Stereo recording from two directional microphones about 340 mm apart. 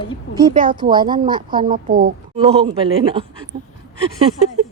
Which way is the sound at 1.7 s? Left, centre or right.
Right.